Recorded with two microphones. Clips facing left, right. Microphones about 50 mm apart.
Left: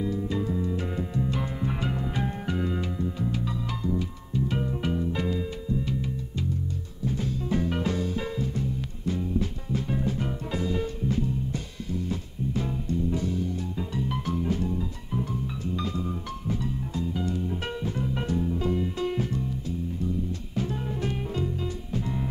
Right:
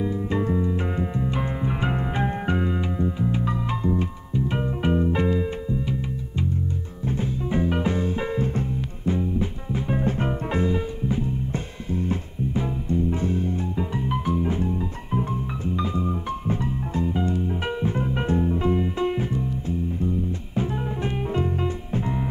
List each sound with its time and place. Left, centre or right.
0.0 s music: right
0.7 s music: right
2.7 s music: right
7.1 s music: right
9.9 s music: right
10.7 s music: centre
11.5 s music: right
20.5 s music: right